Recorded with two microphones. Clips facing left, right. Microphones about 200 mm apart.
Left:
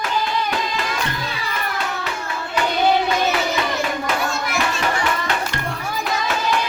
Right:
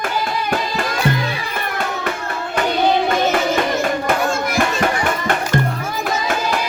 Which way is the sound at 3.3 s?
50° right (ahead or behind).